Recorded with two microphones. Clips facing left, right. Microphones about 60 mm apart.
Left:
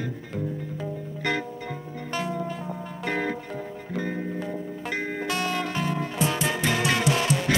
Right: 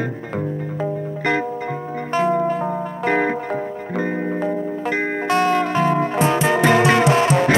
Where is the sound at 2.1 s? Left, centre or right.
Right.